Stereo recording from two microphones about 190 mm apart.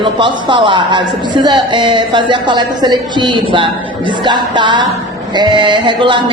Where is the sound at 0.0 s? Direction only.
25° right (ahead or behind).